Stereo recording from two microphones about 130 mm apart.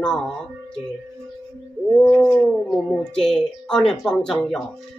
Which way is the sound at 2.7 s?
5° left (ahead or behind).